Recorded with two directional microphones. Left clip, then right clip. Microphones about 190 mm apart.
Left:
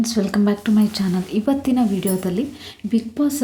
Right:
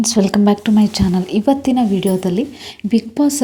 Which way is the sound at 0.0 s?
25° right (ahead or behind).